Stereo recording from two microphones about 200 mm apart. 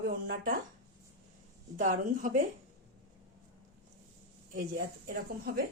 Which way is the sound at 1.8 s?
40° right (ahead or behind).